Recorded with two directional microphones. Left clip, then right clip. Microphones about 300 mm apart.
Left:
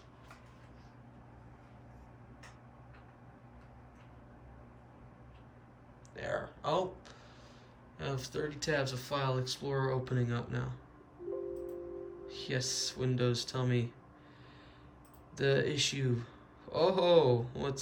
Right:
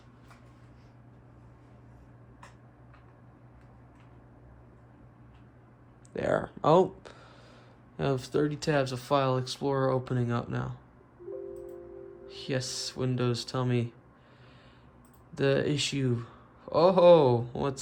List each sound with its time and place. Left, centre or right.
6.1 s speech: centre
12.2 s speech: centre
15.4 s speech: centre